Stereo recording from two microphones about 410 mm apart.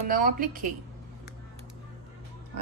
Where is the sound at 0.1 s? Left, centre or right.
Centre.